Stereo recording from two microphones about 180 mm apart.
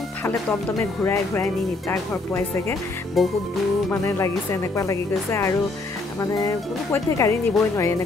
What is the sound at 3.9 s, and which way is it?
Speech, 15° left (ahead or behind).